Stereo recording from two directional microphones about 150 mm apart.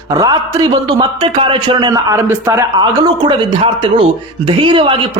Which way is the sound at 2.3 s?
15° right (ahead or behind).